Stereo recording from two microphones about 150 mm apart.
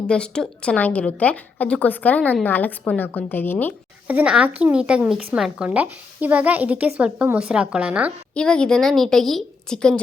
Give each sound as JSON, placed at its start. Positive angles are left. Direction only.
{"t": 0.1, "sound": "a woman's voice", "side_deg": 5}
{"t": 4.0, "sound": "speech", "side_deg": -10}
{"t": 8.4, "sound": "a woman's voice", "side_deg": 5}